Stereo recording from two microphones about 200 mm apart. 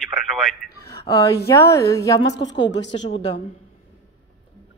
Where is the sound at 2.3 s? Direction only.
60° left (ahead or behind).